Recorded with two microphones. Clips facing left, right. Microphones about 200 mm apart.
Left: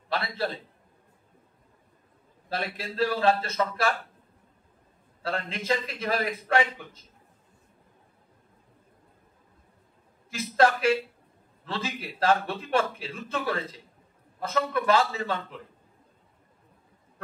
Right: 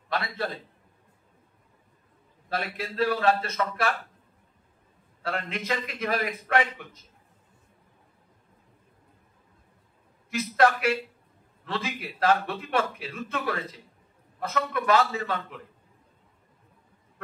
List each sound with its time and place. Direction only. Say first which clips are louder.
0.1 s a man's voice: left 1 dB; 30° left (ahead or behind)
2.5 s a man's voice: right 1 dB; 30° left (ahead or behind)
5.2 s a man's voice: even; 30° left (ahead or behind)
10.3 s a man's voice: even; 30° left (ahead or behind)